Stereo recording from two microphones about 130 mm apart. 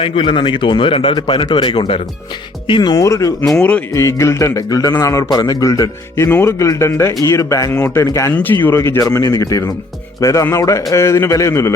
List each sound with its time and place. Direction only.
0.0 s a man's voice: 40° left (ahead or behind); by 3.3 s 25° left (ahead or behind)
3.4 s speech: 5° left (ahead or behind)
3.9 s a man's voice: 20° left (ahead or behind)